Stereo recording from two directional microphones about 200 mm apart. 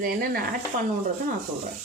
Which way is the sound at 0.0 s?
45° right (ahead or behind).